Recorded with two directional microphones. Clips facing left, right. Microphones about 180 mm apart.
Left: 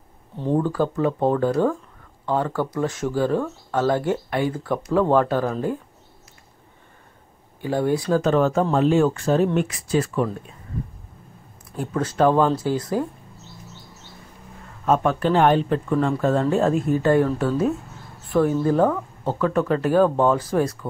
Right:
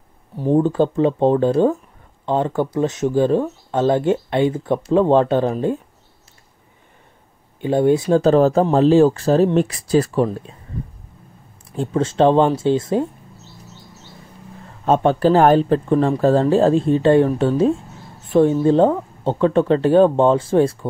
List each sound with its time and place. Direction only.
0.6 s speech: 25° right (ahead or behind)
7.6 s speech: 20° right (ahead or behind); by 10.2 s 40° right (ahead or behind)
11.7 s speech: 25° right (ahead or behind)
14.9 s speech: 30° right (ahead or behind)